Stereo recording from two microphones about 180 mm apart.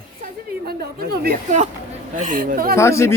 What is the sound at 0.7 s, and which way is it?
Speech, 60° right (ahead or behind).